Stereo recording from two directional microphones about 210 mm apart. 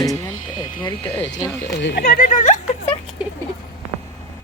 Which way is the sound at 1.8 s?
60° left (ahead or behind).